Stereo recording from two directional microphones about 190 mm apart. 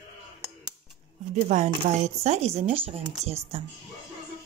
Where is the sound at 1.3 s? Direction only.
40° right (ahead or behind).